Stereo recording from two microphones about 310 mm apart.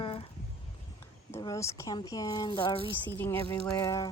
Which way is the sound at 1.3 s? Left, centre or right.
Centre.